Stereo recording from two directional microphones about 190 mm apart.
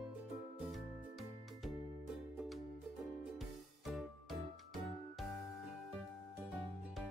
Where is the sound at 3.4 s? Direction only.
Centre (ahead or behind).